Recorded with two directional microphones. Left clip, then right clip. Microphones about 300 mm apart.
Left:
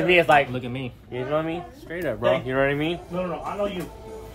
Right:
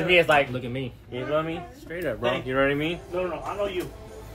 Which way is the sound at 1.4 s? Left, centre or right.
Left.